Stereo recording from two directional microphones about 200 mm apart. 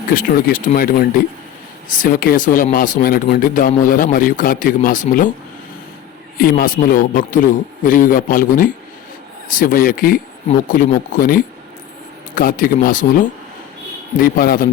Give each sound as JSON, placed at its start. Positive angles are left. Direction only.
{"t": 0.1, "sound": "a man's voice", "side_deg": 45}
{"t": 6.3, "sound": "a man's voice", "side_deg": 50}
{"t": 14.3, "sound": "a man's voice", "side_deg": 45}